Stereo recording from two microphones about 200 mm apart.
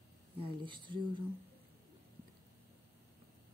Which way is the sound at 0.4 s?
25° right (ahead or behind).